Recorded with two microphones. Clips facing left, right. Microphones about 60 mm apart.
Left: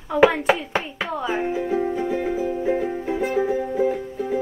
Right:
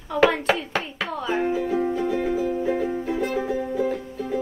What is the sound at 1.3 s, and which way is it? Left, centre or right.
Music, centre.